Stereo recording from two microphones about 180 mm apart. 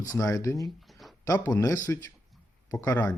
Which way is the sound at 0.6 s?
Centre (ahead or behind).